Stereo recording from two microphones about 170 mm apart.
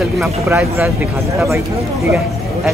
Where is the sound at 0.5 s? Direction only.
10° right (ahead or behind).